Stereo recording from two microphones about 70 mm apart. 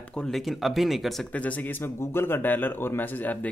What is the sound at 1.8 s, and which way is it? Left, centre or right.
Speech, left.